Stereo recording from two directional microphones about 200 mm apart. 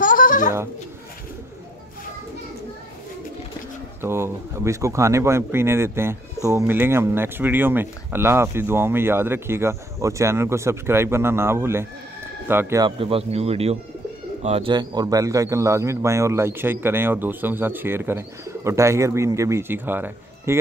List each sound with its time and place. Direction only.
0.0 s bird: 40° left (ahead or behind)
4.0 s speech: 10° right (ahead or behind)
13.0 s speech: 30° right (ahead or behind); by 20.5 s 10° right (ahead or behind)